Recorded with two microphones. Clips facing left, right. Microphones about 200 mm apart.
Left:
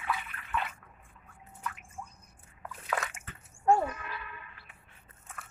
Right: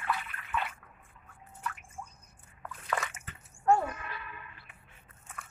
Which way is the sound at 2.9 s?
5° left (ahead or behind).